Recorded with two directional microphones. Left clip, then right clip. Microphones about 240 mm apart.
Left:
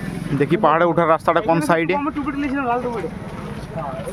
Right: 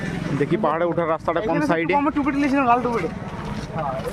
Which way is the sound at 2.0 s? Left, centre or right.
Right.